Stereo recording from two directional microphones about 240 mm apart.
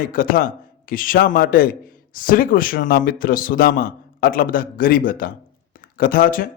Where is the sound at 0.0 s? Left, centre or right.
Left.